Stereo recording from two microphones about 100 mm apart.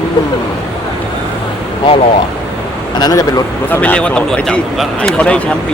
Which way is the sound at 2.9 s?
40° left (ahead or behind).